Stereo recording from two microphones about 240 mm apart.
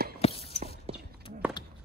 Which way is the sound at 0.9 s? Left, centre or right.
Right.